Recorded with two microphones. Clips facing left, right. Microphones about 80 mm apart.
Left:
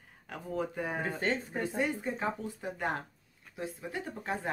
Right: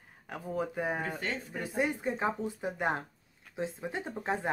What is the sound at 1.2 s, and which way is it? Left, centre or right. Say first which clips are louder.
Speech: left 4 dB; left.